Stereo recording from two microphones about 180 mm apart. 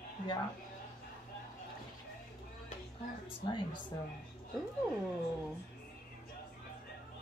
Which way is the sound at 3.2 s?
25° left (ahead or behind).